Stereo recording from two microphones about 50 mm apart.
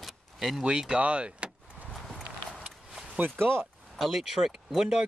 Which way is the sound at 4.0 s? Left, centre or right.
Centre.